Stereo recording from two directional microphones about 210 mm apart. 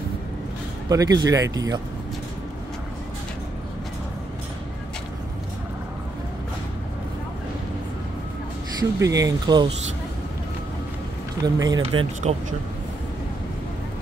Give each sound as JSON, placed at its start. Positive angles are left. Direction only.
{"t": 0.8, "sound": "speech", "side_deg": -15}
{"t": 9.0, "sound": "speech", "side_deg": -15}
{"t": 11.4, "sound": "speech", "side_deg": -15}
{"t": 12.2, "sound": "speech", "side_deg": -35}